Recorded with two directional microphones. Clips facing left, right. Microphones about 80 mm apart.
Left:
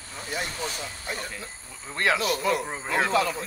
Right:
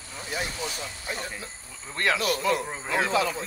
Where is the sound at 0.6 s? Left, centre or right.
Left.